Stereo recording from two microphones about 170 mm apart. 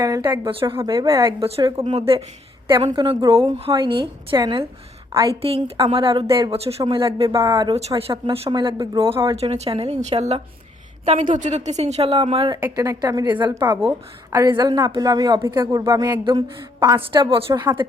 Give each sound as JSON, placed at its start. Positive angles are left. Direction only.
{"t": 0.0, "sound": "speech", "side_deg": -20}
{"t": 1.4, "sound": "speech", "side_deg": -35}
{"t": 12.6, "sound": "speech", "side_deg": -20}